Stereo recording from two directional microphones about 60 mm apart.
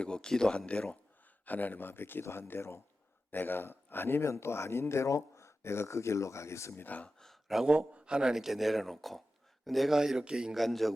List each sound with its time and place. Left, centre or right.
0.0 s speech: centre
1.5 s speech: left
6.8 s speech: left
7.4 s speech: centre
7.7 s speech: centre
10.5 s speech: centre